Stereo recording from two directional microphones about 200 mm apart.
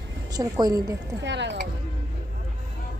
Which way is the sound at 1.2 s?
60° right (ahead or behind).